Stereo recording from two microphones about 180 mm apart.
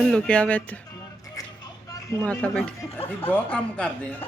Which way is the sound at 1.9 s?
10° left (ahead or behind).